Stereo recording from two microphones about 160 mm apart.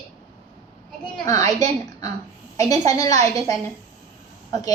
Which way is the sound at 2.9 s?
20° left (ahead or behind).